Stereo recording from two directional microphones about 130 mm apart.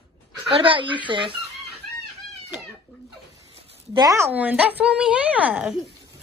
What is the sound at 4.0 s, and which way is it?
Speech, 25° right (ahead or behind).